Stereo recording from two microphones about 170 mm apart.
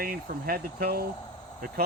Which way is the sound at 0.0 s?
60° right (ahead or behind).